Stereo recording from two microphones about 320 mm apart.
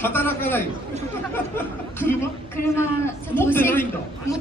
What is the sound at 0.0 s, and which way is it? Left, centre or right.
A woman's voice, centre.